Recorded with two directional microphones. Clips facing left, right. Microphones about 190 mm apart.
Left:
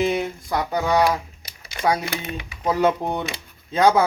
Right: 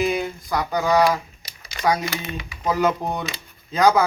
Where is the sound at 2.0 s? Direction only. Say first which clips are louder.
Even; 60° left (ahead or behind).